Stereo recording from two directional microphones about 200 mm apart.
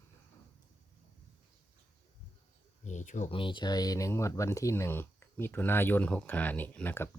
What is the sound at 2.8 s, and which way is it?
Speech, 40° left (ahead or behind).